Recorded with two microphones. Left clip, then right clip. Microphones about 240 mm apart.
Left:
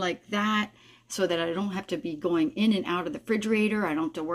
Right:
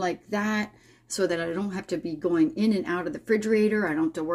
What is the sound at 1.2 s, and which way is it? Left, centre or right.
Speech, centre.